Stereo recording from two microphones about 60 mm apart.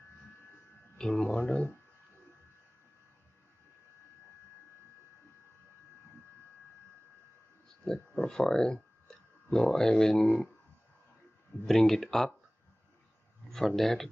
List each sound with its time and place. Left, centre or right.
0.9 s speech: centre
7.8 s a sound: centre
8.3 s speech: centre
11.6 s speech: centre
13.5 s speech: centre